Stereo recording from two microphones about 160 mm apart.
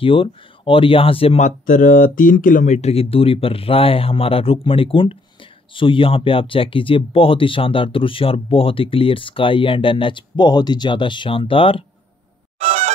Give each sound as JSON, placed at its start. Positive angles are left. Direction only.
{"t": 0.0, "sound": "speech", "side_deg": 35}
{"t": 1.7, "sound": "speech", "side_deg": 60}
{"t": 12.5, "sound": "music", "side_deg": -45}